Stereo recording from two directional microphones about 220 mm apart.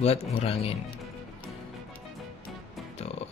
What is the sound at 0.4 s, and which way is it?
Speech, 25° left (ahead or behind).